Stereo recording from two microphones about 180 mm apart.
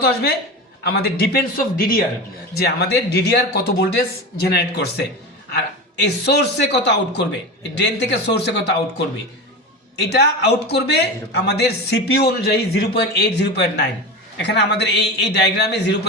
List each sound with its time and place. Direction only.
0.0 s a man's voice: 60° left (ahead or behind)
2.6 s a man's voice: 65° left (ahead or behind)